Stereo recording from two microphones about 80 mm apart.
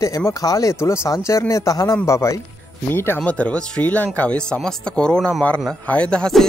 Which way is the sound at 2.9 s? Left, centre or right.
Left.